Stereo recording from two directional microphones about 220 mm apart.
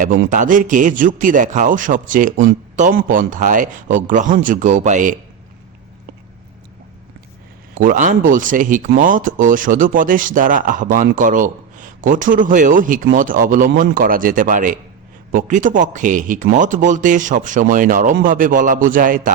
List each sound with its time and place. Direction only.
0.0 s speech: 35° right (ahead or behind)
7.8 s speech: 35° right (ahead or behind)